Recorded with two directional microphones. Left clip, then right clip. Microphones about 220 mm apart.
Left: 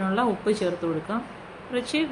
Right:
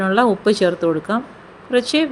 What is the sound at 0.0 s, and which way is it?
Speech, 40° right (ahead or behind).